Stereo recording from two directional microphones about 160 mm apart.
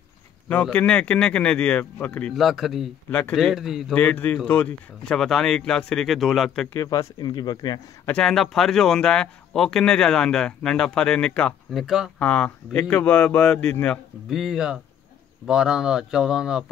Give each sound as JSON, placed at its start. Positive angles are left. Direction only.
{"t": 0.5, "sound": "speech", "side_deg": 5}
{"t": 3.9, "sound": "a man's voice", "side_deg": 10}
{"t": 6.7, "sound": "speech", "side_deg": 20}
{"t": 8.1, "sound": "a man's voice", "side_deg": 5}
{"t": 14.4, "sound": "speech", "side_deg": -5}